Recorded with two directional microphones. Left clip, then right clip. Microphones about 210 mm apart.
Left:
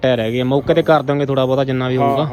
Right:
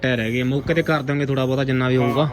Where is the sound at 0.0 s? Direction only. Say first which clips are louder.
Left 6 dB; 15° left (ahead or behind).